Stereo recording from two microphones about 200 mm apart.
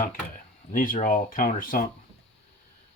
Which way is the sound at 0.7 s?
45° left (ahead or behind).